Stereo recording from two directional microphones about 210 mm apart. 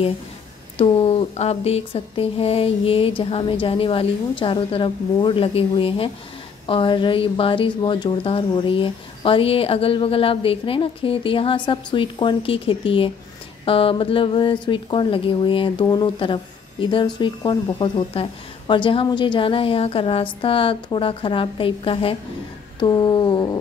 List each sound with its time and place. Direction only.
0.7 s speech: 30° left (ahead or behind)